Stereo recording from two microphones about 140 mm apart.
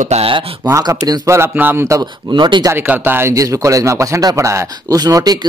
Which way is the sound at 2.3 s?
30° right (ahead or behind).